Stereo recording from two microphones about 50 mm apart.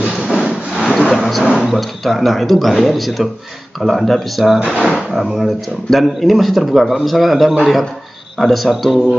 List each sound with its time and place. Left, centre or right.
0.1 s sawing: centre
0.8 s vehicle: centre
1.7 s speech: centre
4.7 s speech: centre
5.1 s speech: centre